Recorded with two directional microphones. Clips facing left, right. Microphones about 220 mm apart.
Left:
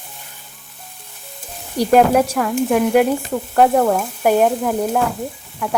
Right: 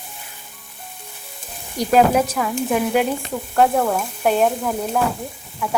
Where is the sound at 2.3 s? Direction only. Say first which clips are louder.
Left 4 dB; centre (ahead or behind).